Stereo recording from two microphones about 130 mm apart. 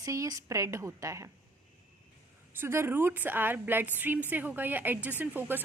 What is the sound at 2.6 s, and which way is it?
A woman's voice, 20° right (ahead or behind).